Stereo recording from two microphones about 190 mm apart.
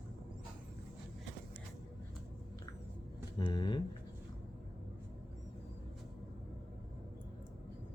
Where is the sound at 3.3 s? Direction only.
25° left (ahead or behind).